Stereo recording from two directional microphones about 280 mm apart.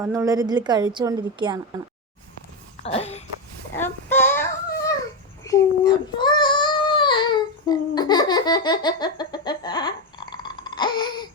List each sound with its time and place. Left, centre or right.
0.0 s a woman's voice: centre
2.8 s speech: left
3.8 s child singing: centre